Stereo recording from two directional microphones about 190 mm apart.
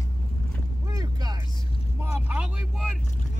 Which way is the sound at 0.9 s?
20° right (ahead or behind).